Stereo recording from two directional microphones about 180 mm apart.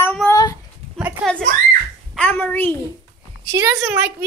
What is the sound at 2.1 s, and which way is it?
Speech, 10° left (ahead or behind).